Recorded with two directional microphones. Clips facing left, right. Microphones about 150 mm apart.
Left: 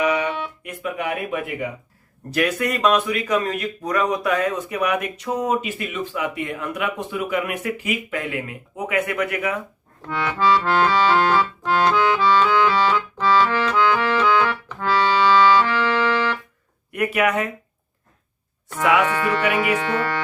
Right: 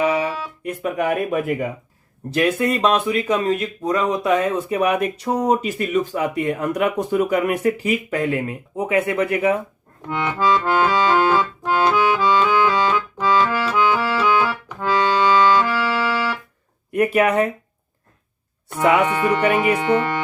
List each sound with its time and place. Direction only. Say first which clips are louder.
0.0 s music: right 1 dB; 30° right (ahead or behind)
2.3 s speech: right 3 dB; 25° right (ahead or behind)
10.1 s accordion: even; 20° right (ahead or behind)
16.9 s speech: right 4 dB; 30° right (ahead or behind)
18.8 s speech: right 2 dB; 20° right (ahead or behind)